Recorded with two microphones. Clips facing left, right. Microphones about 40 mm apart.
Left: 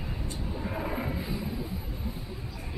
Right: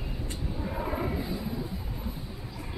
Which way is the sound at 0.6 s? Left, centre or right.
Centre.